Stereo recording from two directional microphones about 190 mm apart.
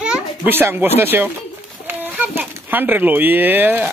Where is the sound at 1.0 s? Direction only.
10° right (ahead or behind).